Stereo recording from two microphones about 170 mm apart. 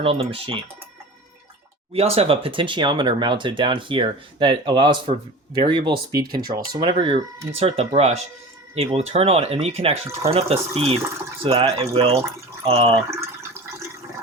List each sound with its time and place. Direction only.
0.0 s speech: 35° right (ahead or behind)
1.9 s speech: 35° right (ahead or behind)
6.2 s speech: 60° right (ahead or behind)
6.5 s speech: 30° right (ahead or behind)